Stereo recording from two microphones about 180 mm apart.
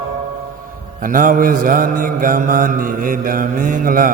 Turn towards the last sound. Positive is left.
turn(degrees=-50)  # may be behind; listen again after turning